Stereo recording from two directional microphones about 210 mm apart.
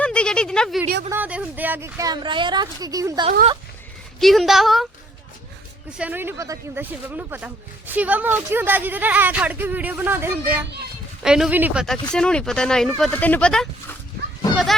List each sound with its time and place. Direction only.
0.0 s a sound: 5° left (ahead or behind)
1.1 s speech: 5° right (ahead or behind)
4.2 s speech: centre (ahead or behind)
6.0 s a child's voice: 10° right (ahead or behind)